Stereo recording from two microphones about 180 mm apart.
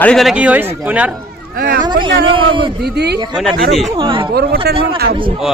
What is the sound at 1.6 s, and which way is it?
Speech, 55° right (ahead or behind).